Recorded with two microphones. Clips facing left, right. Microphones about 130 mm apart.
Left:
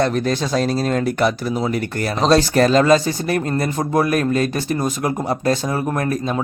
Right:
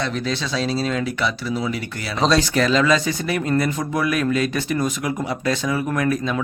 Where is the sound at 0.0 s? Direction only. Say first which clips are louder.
Left 6 dB; 50° left (ahead or behind).